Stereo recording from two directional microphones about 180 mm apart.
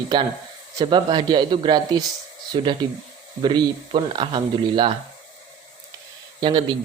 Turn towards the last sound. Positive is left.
turn(degrees=-30)  # may be behind; listen again after turning